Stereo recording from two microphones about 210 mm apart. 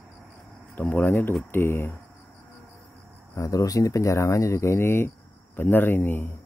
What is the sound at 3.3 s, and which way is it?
Speech, 15° left (ahead or behind).